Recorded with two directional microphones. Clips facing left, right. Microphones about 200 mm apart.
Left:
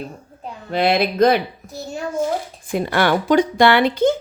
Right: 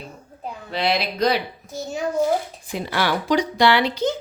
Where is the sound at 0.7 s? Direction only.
50° left (ahead or behind).